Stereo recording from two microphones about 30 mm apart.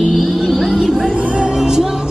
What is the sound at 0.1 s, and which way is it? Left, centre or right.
Music, centre.